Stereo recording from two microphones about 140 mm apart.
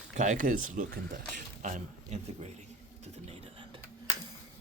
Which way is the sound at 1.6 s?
60° right (ahead or behind).